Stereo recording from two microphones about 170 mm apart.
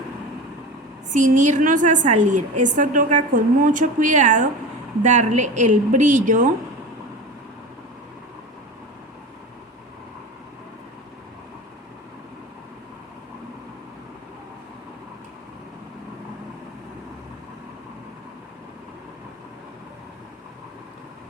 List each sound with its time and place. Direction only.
1.1 s a woman's voice: 45° right (ahead or behind)